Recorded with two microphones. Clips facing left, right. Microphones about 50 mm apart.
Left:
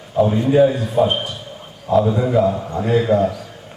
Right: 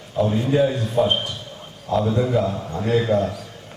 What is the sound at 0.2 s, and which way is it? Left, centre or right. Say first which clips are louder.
A man's voice: left 5 dB; centre.